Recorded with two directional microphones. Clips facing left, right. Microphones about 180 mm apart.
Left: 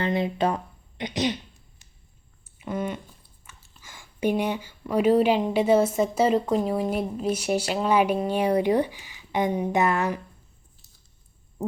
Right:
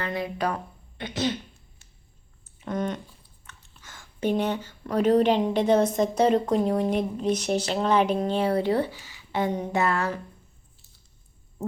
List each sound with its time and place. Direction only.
0.0 s speech: 25° left (ahead or behind)
2.6 s speech: 5° left (ahead or behind)